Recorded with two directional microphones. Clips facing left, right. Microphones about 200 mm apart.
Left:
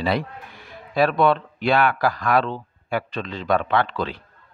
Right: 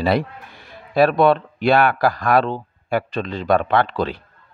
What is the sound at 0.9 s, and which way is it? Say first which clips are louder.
Speech: right 4 dB; 35° right (ahead or behind).